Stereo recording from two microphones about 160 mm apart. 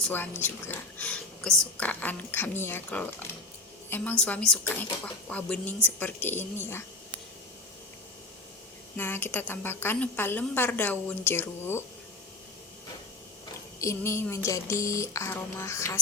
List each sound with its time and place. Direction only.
0.0 s a woman's voice: 15° left (ahead or behind)
9.0 s a woman's voice: 15° left (ahead or behind)
13.7 s a woman's voice: 15° left (ahead or behind)